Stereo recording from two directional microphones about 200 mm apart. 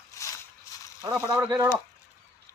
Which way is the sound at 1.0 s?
15° right (ahead or behind).